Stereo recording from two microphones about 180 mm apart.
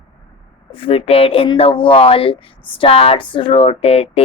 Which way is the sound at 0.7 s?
30° left (ahead or behind).